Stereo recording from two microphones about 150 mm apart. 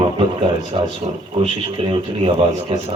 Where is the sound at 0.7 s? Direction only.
35° right (ahead or behind).